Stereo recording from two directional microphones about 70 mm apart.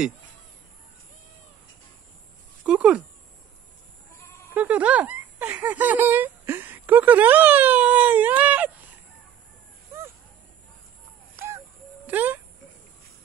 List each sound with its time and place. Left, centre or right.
2.6 s speech: centre
4.6 s speech: right
11.3 s a sound: right
12.1 s speech: right